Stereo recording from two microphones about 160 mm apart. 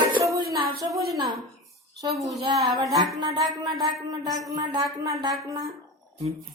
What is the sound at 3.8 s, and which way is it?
Speech, 25° right (ahead or behind).